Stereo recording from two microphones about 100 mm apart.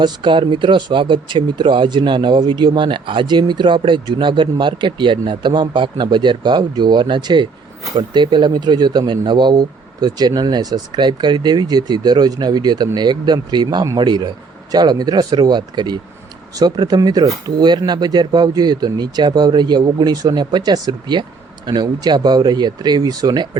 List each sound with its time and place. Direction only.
0.0 s speech: 50° right (ahead or behind)